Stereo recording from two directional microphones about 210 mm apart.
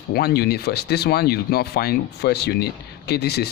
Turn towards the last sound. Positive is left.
turn(degrees=50)  # may be behind; listen again after turning